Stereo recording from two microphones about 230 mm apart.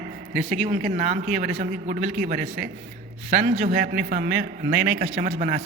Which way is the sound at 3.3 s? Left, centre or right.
Right.